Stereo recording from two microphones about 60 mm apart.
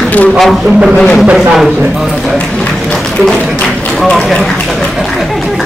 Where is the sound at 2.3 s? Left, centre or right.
Centre.